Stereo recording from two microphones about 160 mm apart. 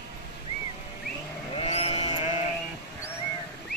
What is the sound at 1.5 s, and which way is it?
Sheep, 40° left (ahead or behind).